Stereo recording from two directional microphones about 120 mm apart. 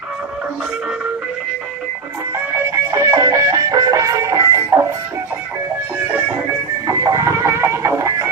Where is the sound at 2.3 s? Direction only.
20° right (ahead or behind).